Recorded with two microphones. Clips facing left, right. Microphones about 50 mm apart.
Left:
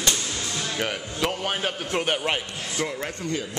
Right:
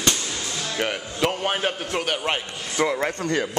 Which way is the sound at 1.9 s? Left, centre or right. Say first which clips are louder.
Left 3 dB; centre.